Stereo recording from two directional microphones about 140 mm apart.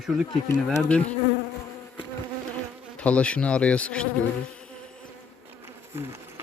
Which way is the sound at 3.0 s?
10° left (ahead or behind).